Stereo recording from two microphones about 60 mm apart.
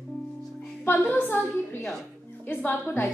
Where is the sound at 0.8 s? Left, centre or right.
Left.